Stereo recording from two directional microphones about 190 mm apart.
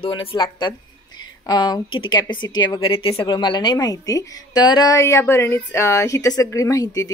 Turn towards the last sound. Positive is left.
turn(degrees=20)  # may be behind; listen again after turning